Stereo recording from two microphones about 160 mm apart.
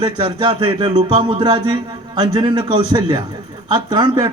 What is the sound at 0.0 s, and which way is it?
A man's voice, 30° right (ahead or behind).